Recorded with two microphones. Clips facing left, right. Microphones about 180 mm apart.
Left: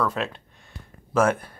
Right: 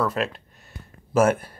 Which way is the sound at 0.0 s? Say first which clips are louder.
Right 1 dB; 5° right (ahead or behind).